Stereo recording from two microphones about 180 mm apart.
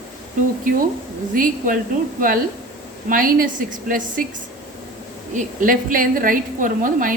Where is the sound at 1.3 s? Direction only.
50° right (ahead or behind).